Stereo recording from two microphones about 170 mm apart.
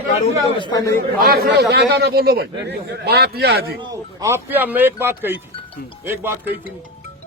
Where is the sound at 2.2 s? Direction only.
65° right (ahead or behind).